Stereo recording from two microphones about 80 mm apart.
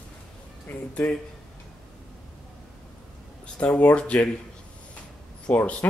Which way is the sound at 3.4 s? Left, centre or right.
Centre.